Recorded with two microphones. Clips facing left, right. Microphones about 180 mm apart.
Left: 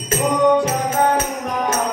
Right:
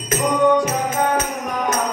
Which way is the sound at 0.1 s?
30° left (ahead or behind).